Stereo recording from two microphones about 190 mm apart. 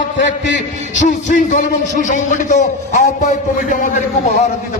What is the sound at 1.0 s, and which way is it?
A man's voice, 40° left (ahead or behind).